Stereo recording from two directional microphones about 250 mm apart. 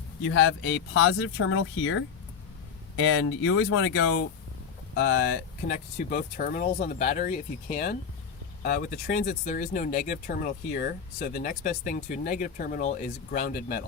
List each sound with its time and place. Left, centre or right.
0.3 s speech: left